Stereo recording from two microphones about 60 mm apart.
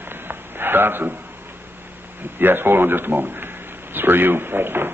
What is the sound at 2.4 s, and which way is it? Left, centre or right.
A man's voice, right.